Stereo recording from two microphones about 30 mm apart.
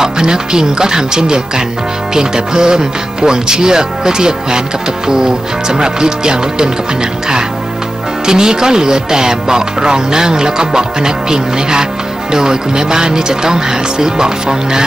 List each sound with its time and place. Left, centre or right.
0.0 s speech: right